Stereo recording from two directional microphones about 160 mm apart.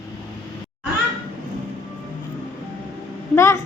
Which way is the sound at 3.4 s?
15° left (ahead or behind).